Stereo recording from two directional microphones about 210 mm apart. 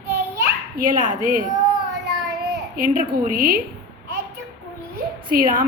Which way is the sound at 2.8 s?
45° right (ahead or behind).